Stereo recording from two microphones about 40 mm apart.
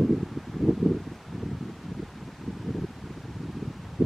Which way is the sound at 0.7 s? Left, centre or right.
Centre.